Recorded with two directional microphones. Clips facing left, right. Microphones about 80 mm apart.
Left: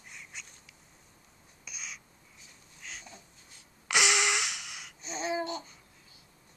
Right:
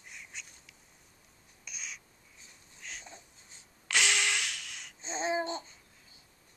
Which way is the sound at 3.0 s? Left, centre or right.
Right.